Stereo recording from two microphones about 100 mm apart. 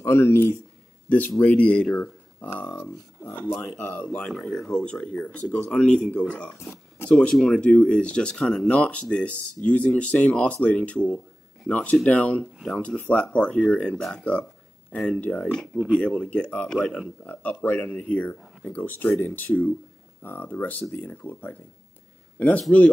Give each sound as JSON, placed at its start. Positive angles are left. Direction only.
{"t": 0.0, "sound": "speech", "side_deg": 25}
{"t": 6.6, "sound": "a sound", "side_deg": 25}
{"t": 7.1, "sound": "speech", "side_deg": 10}